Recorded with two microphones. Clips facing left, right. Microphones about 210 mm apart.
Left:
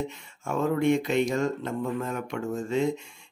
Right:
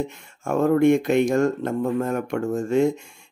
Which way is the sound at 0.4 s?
50° right (ahead or behind).